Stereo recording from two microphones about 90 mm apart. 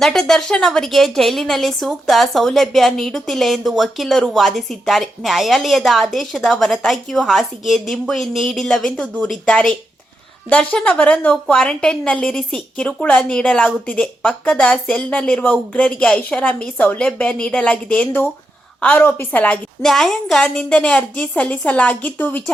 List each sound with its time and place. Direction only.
0.0 s a woman's voice: 5° left (ahead or behind)
19.8 s a woman's voice: 5° left (ahead or behind); by 22.5 s 20° left (ahead or behind)